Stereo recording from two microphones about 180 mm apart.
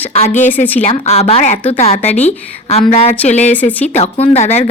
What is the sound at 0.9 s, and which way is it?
A woman's voice, 35° left (ahead or behind).